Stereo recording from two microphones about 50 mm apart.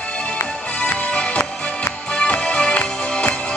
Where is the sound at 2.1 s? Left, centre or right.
Centre.